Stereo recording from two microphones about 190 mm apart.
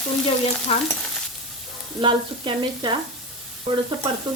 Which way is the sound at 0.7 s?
30° left (ahead or behind).